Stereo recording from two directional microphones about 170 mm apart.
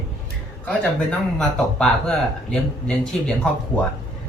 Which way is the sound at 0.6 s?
5° left (ahead or behind).